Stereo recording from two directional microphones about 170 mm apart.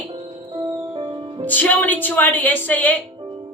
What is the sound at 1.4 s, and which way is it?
A woman's voice, 10° left (ahead or behind).